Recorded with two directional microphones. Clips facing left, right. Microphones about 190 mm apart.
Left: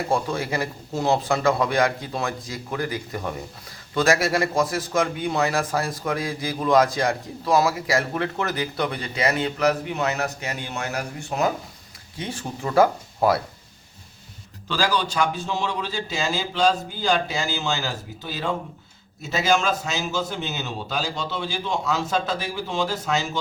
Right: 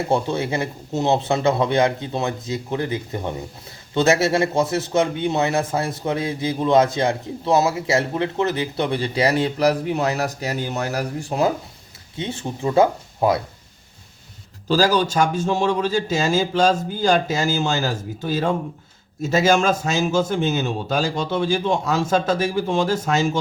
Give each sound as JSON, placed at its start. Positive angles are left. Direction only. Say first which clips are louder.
{"t": 0.1, "sound": "a man's voice", "louder": "right 3 dB", "side_deg": -25}
{"t": 14.7, "sound": "a man's voice", "louder": "right 6 dB", "side_deg": -40}